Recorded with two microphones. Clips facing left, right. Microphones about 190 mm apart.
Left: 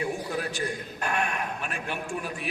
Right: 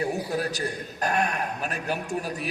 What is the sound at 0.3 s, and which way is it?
A man's voice, 40° right (ahead or behind).